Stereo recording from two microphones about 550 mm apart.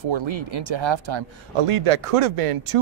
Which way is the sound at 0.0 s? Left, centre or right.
Right.